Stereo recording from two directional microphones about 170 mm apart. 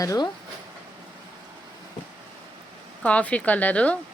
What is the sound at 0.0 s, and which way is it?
Speech, 20° left (ahead or behind).